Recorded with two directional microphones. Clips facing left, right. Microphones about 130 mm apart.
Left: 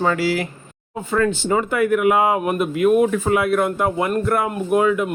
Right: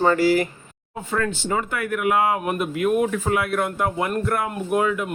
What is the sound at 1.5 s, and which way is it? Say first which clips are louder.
Speech: left 7 dB; 15° left (ahead or behind).